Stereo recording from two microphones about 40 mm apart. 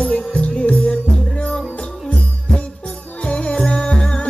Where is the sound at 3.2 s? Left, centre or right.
Left.